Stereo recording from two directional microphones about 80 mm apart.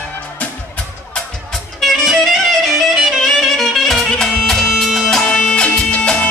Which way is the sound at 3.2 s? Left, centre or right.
Centre.